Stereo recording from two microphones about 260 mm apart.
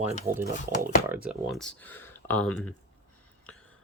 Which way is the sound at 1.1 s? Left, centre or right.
Centre.